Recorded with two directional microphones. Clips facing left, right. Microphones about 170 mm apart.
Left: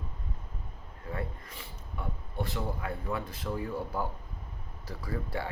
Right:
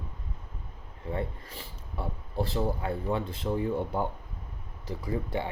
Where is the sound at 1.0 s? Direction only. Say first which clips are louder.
Right 4 dB; 30° right (ahead or behind).